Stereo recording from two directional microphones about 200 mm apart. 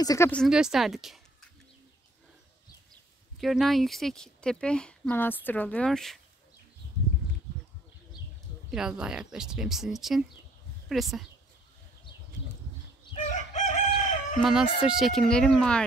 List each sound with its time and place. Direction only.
0.0 s speech: 15° left (ahead or behind)
0.3 s speech: centre (ahead or behind)
3.3 s speech: centre (ahead or behind)
8.6 s speech: 5° right (ahead or behind)
13.1 s crowing: 35° left (ahead or behind)
14.4 s speech: centre (ahead or behind)